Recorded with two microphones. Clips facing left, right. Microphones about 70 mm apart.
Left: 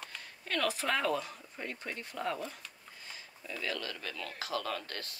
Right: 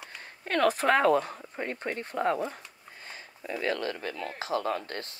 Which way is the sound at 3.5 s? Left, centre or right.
Right.